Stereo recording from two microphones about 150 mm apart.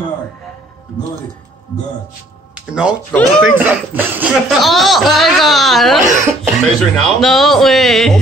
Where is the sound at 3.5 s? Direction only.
10° right (ahead or behind).